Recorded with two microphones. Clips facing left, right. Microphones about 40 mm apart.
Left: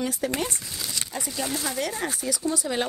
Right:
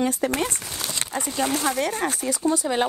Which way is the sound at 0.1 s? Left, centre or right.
Right.